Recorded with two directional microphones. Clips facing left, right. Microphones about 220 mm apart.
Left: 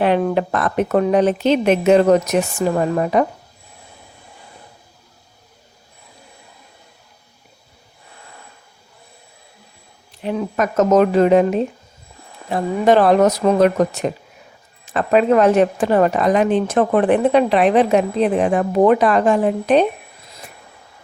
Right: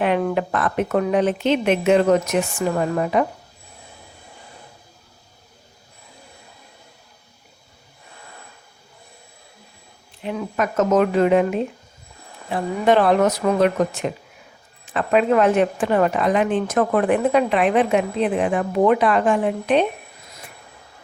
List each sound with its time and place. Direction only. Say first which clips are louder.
0.3 s speech: left 3 dB; 35° left (ahead or behind)
10.2 s speech: left 3 dB; 35° left (ahead or behind)